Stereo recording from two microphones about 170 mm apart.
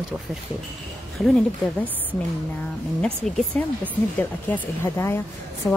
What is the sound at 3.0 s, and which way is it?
Speech, 5° left (ahead or behind).